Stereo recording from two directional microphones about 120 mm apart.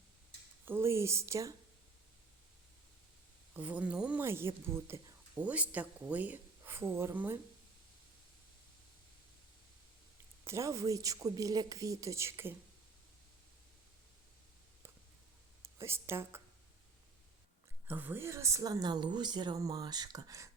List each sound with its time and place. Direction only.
0.6 s a woman's voice: 20° right (ahead or behind)
3.5 s speech: 15° right (ahead or behind)
4.2 s a woman's voice: 20° right (ahead or behind)
10.4 s a woman's voice: 25° right (ahead or behind)
15.6 s speech: 20° right (ahead or behind)
17.8 s speech: 15° right (ahead or behind)